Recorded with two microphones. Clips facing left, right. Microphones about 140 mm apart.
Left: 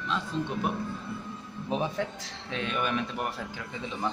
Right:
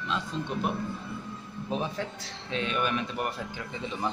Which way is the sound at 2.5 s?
Centre (ahead or behind).